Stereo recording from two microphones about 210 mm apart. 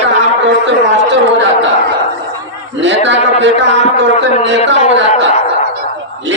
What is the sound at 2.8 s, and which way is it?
Speech, 60° right (ahead or behind).